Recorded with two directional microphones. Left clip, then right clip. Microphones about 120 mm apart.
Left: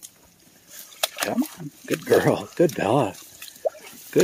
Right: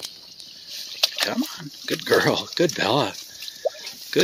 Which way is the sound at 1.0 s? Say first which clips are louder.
Right 2 dB; 10° left (ahead or behind).